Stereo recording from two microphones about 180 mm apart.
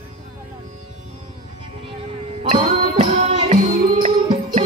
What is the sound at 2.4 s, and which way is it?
Music, 30° right (ahead or behind).